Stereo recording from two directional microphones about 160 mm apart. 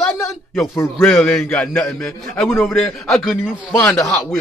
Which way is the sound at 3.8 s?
15° left (ahead or behind).